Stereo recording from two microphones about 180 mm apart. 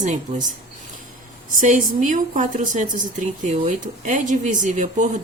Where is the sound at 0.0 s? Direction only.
40° right (ahead or behind).